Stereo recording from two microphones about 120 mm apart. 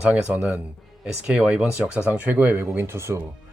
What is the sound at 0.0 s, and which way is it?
Speech, 10° right (ahead or behind).